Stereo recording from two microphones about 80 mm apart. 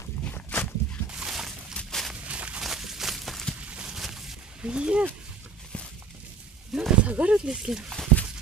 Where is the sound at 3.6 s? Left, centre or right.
Centre.